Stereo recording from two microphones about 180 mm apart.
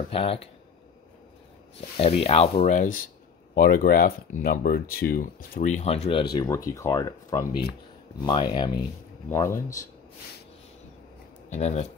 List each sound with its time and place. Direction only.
0.1 s rub: 30° left (ahead or behind)
2.0 s rub: 35° left (ahead or behind)
2.6 s speech: 50° left (ahead or behind)
6.3 s speech: 20° left (ahead or behind)
9.3 s speech: 15° left (ahead or behind)
11.5 s rub: 40° left (ahead or behind)